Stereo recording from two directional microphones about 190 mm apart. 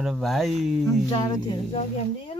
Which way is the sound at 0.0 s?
Centre (ahead or behind).